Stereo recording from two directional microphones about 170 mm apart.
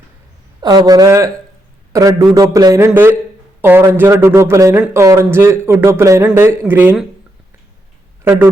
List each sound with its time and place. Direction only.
0.6 s a man's voice: 25° right (ahead or behind)
8.2 s speech: 15° right (ahead or behind)